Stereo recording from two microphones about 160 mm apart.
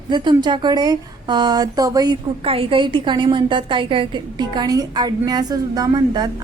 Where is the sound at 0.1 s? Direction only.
30° right (ahead or behind).